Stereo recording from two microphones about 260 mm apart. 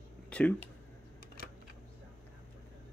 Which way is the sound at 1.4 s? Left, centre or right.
Left.